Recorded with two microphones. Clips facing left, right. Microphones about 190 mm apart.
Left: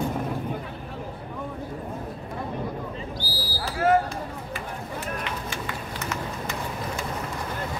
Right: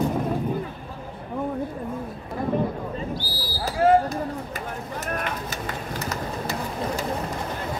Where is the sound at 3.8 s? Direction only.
40° right (ahead or behind).